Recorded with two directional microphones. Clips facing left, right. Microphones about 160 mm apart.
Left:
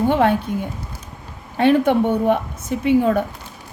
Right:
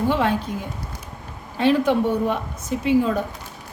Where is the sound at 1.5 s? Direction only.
55° left (ahead or behind).